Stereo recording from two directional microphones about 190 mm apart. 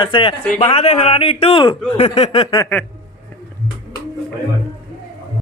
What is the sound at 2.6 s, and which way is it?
Speech, 10° left (ahead or behind).